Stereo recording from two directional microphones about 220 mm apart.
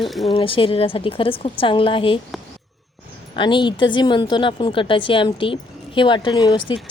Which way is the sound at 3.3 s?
20° left (ahead or behind).